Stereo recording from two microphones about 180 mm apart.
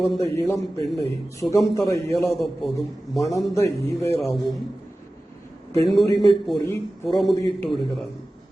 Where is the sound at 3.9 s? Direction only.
15° left (ahead or behind).